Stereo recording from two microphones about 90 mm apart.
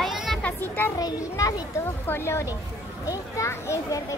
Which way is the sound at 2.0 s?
30° left (ahead or behind).